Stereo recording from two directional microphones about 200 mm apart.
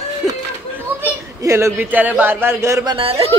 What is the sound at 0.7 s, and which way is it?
Speech, 10° right (ahead or behind).